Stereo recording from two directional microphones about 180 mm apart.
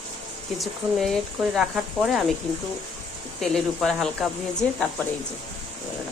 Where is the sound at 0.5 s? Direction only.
Centre (ahead or behind).